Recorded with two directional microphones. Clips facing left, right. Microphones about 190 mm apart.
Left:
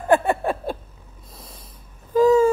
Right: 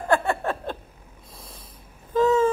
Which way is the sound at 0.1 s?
15° left (ahead or behind).